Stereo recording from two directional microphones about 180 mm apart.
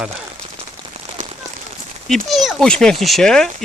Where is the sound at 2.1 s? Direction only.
Centre (ahead or behind).